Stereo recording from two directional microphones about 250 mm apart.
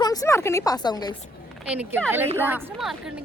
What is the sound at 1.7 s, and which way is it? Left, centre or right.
A woman's voice, centre.